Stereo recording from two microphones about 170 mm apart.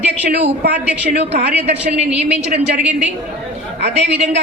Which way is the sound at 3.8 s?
80° right.